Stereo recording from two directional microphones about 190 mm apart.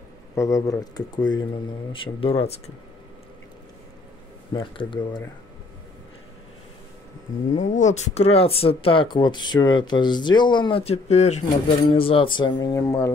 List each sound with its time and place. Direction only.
0.4 s speech: 15° left (ahead or behind); by 2.7 s 35° left (ahead or behind)
4.6 s speech: 25° left (ahead or behind)
7.5 s speech: 40° left (ahead or behind); by 13.1 s 15° left (ahead or behind)